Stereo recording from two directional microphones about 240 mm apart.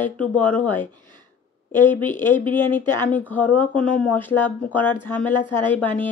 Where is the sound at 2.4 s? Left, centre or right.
Centre.